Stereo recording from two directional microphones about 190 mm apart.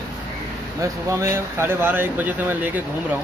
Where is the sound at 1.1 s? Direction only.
15° right (ahead or behind).